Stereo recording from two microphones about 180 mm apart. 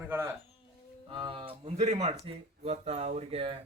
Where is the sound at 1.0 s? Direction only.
30° right (ahead or behind).